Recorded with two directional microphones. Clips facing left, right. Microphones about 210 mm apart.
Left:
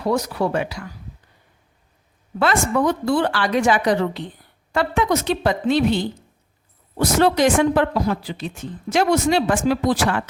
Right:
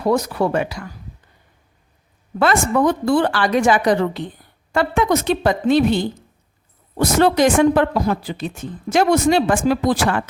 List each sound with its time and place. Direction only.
0.0 s a woman's voice: 50° right (ahead or behind)
2.4 s a woman's voice: 50° right (ahead or behind)